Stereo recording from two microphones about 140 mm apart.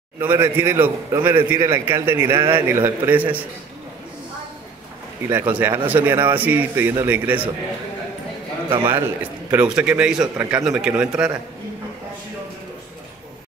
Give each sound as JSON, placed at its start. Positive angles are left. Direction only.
{"t": 0.2, "sound": "a man's voice", "side_deg": -15}
{"t": 5.3, "sound": "a man's voice", "side_deg": -15}
{"t": 8.6, "sound": "a man's voice", "side_deg": -35}
{"t": 9.5, "sound": "a man's voice", "side_deg": -5}